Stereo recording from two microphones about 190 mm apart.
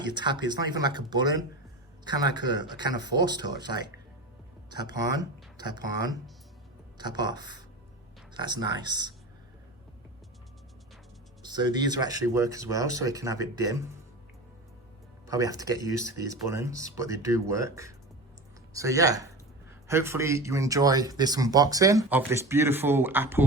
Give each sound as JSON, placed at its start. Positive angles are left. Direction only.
{"t": 0.1, "sound": "speech", "side_deg": -25}
{"t": 3.0, "sound": "speech", "side_deg": 65}
{"t": 3.7, "sound": "speech", "side_deg": -25}
{"t": 5.1, "sound": "speech", "side_deg": -20}
{"t": 7.3, "sound": "speech", "side_deg": -20}
{"t": 11.4, "sound": "speech", "side_deg": -20}
{"t": 15.3, "sound": "speech", "side_deg": -20}